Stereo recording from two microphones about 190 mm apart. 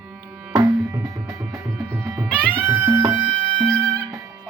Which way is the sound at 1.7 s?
5° right (ahead or behind).